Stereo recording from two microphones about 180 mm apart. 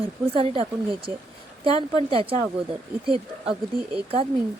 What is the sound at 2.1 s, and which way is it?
Speech, 30° right (ahead or behind).